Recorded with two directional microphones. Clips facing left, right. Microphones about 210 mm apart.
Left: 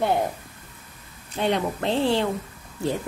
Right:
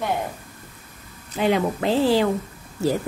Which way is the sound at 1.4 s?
5° right (ahead or behind).